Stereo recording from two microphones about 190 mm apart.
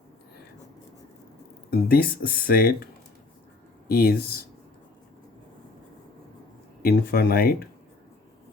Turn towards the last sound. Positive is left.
turn(degrees=50)  # may be behind; listen again after turning